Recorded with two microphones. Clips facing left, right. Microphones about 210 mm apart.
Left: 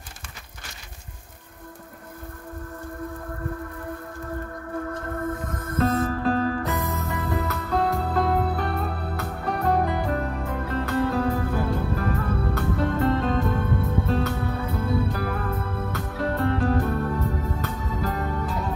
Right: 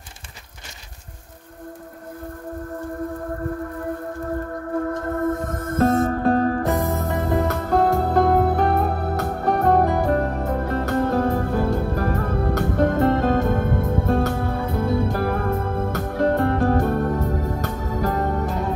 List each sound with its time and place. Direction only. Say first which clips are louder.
4.7 s music: right 6 dB; 40° right (ahead or behind)